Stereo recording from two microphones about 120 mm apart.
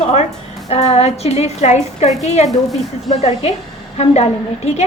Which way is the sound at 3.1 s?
60° left (ahead or behind).